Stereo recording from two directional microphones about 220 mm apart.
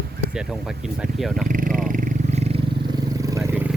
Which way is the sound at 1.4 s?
40° right (ahead or behind).